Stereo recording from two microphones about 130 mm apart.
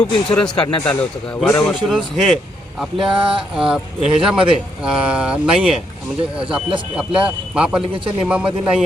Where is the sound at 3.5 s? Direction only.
5° right (ahead or behind).